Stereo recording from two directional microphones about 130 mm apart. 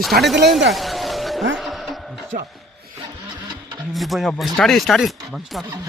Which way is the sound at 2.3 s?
90° right.